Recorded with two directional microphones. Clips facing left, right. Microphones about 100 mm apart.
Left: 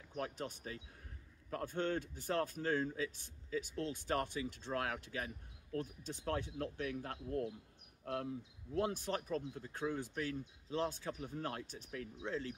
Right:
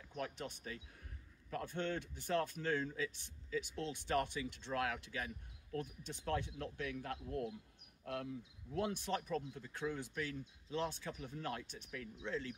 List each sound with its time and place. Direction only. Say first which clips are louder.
0.2 s speech: left 2 dB; 40° left (ahead or behind)